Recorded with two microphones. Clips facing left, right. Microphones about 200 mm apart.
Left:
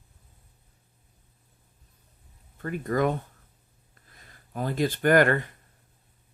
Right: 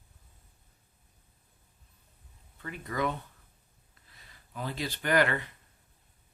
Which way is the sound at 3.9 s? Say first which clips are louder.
Left 4 dB; 50° left (ahead or behind).